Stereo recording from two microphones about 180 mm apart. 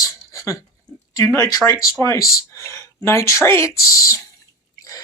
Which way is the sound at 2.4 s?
15° left (ahead or behind).